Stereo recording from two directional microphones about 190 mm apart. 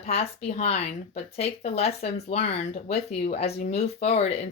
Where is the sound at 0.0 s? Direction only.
35° left (ahead or behind).